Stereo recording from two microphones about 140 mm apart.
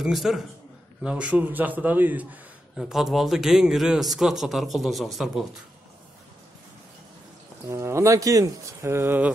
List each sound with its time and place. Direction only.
0.0 s a man's voice: centre (ahead or behind)
2.8 s a man's voice: centre (ahead or behind)
7.6 s speech: 20° right (ahead or behind)